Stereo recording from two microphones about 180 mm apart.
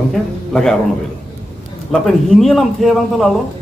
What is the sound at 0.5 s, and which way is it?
Speech, centre (ahead or behind).